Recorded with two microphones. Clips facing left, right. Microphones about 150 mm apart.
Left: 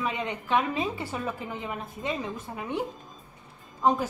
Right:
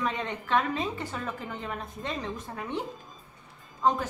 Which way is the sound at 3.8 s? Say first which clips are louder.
Left 2 dB; 10° left (ahead or behind).